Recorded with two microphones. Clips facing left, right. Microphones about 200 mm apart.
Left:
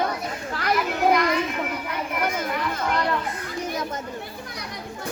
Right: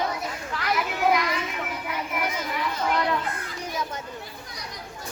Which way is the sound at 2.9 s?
Centre (ahead or behind).